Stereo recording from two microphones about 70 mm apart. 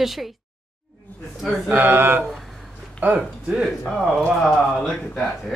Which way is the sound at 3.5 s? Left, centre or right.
Centre.